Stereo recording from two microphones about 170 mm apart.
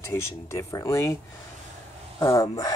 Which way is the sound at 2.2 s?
15° left (ahead or behind).